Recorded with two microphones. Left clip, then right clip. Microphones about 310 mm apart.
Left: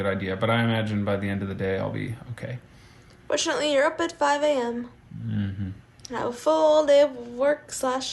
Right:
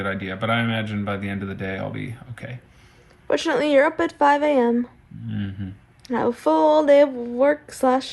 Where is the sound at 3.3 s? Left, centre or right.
Centre.